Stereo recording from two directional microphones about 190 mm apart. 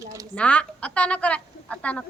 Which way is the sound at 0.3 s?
5° left (ahead or behind).